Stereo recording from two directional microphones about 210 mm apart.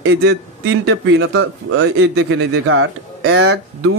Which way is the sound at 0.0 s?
55° right (ahead or behind).